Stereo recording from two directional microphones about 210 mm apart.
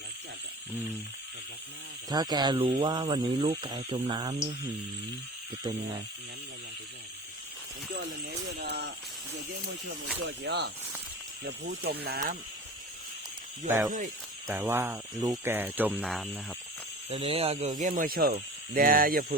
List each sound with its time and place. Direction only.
2.0 s speech: 20° right (ahead or behind)
5.7 s speech: 25° right (ahead or behind)
8.5 s speech: 50° right (ahead or behind)
10.2 s speech: 55° right (ahead or behind)
13.7 s speech: 15° right (ahead or behind)
17.1 s speech: 25° right (ahead or behind); by 19.2 s 40° right (ahead or behind)